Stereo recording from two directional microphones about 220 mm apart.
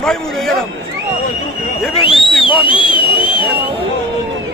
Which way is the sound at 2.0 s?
25° left (ahead or behind).